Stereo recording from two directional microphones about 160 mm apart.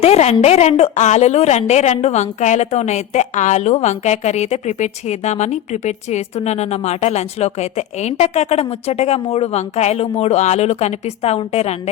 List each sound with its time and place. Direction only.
0.0 s a woman's voice: 40° left (ahead or behind)